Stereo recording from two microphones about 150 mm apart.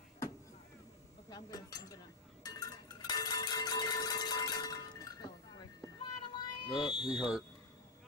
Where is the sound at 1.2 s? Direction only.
25° left (ahead or behind).